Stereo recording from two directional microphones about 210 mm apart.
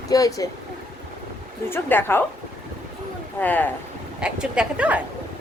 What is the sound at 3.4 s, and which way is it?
Speech, 10° left (ahead or behind).